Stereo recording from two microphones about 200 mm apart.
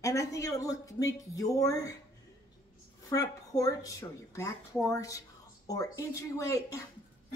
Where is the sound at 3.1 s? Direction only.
15° left (ahead or behind).